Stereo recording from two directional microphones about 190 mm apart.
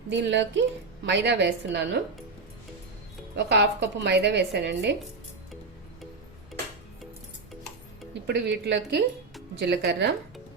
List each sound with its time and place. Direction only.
0.1 s a woman's voice: 70° right (ahead or behind)
3.3 s speech: 65° right (ahead or behind)
8.1 s speech: 65° right (ahead or behind)